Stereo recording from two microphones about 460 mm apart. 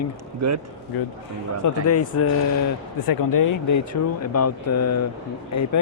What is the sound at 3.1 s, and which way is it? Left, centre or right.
Speech, left.